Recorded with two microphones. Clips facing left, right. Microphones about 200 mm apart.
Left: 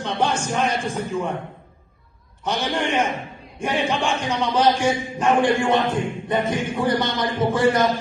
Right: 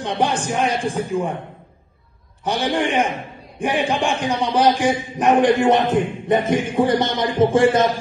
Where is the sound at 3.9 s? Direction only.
15° right (ahead or behind).